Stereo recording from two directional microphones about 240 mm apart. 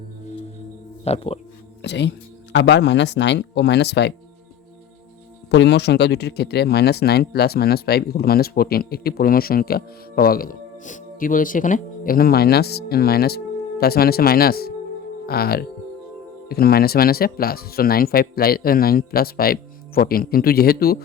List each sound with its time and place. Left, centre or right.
1.0 s speech: left
1.8 s speech: left
5.5 s speech: left